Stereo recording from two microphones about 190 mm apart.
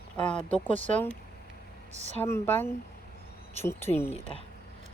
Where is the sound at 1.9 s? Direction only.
35° right (ahead or behind).